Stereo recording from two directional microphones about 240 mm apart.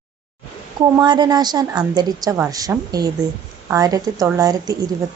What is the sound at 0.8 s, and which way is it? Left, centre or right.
Speech, centre.